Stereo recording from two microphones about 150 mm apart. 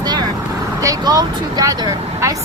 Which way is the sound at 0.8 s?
25° right (ahead or behind).